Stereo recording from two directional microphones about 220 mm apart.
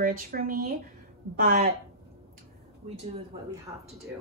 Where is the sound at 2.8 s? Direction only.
30° right (ahead or behind).